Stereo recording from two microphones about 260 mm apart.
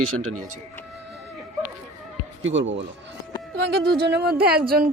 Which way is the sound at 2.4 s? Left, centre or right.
Right.